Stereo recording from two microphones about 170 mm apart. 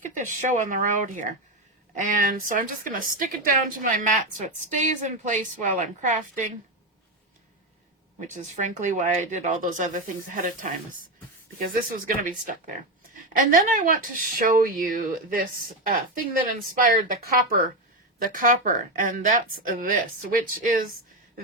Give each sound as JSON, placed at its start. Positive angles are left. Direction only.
{"t": 0.0, "sound": "a woman's voice", "side_deg": -50}
{"t": 8.3, "sound": "a woman's voice", "side_deg": -45}
{"t": 16.8, "sound": "a woman's voice", "side_deg": -55}